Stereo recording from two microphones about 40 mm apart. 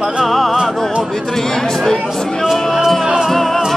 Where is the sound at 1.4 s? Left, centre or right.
Centre.